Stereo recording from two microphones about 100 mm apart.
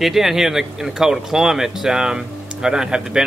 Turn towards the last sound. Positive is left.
turn(degrees=-5)  # may be behind; listen again after turning